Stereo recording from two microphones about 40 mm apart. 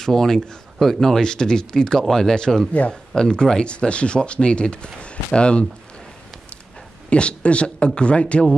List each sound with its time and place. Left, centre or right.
0.0 s speech: centre
1.2 s speech: centre
7.1 s speech: left